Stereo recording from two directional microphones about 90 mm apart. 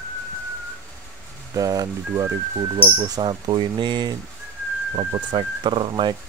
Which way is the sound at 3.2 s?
60° right (ahead or behind).